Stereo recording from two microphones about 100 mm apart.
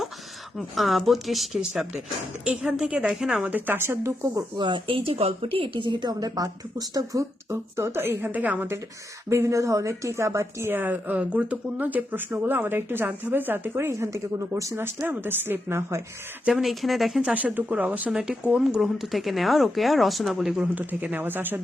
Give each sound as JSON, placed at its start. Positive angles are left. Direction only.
{"t": 0.5, "sound": "a woman's voice", "side_deg": 0}
{"t": 3.5, "sound": "a woman's voice", "side_deg": -20}
{"t": 4.5, "sound": "a woman's voice", "side_deg": -55}
{"t": 16.5, "sound": "speech", "side_deg": -5}
{"t": 17.3, "sound": "a woman's voice", "side_deg": -15}
{"t": 20.7, "sound": "a woman's voice", "side_deg": -15}